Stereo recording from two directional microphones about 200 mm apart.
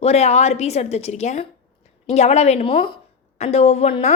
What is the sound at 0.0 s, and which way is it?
A woman's voice, 30° left (ahead or behind).